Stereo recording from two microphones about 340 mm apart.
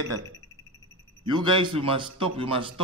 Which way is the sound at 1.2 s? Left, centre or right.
Centre.